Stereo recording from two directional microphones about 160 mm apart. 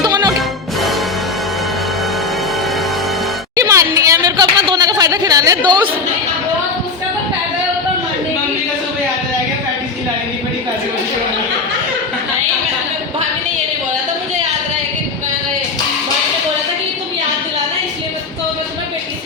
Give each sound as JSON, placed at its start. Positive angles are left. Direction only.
{"t": 0.0, "sound": "music", "side_deg": -25}
{"t": 0.3, "sound": "music", "side_deg": 0}
{"t": 3.5, "sound": "a sound", "side_deg": -20}